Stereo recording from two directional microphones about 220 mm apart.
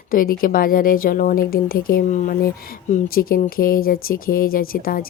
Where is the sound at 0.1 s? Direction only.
40° left (ahead or behind).